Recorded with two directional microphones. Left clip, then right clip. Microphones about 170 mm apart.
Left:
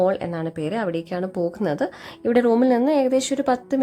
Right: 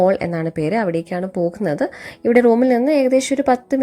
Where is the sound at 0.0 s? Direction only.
20° right (ahead or behind).